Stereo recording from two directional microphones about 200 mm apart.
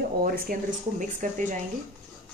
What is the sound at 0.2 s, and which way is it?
Speech, 45° right (ahead or behind).